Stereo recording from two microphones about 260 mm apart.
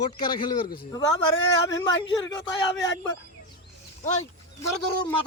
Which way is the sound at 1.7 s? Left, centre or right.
Left.